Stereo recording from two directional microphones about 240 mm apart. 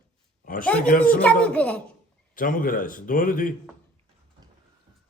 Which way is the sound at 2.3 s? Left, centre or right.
Left.